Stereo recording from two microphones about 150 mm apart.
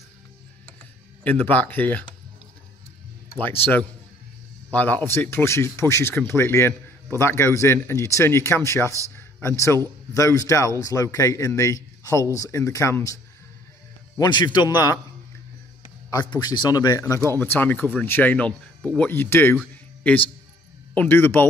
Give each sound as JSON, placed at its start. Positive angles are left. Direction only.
{"t": 1.2, "sound": "speech", "side_deg": 10}
{"t": 3.3, "sound": "speech", "side_deg": 15}
{"t": 16.1, "sound": "speech", "side_deg": 25}
{"t": 20.9, "sound": "speech", "side_deg": 10}